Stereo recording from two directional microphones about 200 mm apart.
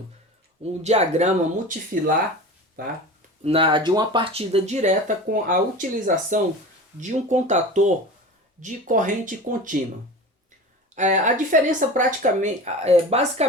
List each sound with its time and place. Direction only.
0.6 s speech: 35° right (ahead or behind)
3.4 s speech: 25° right (ahead or behind)
10.9 s speech: 40° right (ahead or behind)